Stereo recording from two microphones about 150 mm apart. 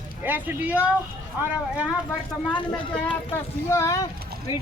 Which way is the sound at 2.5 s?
35° left (ahead or behind).